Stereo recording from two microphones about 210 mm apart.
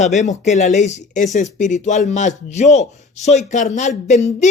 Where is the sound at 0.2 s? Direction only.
35° left (ahead or behind).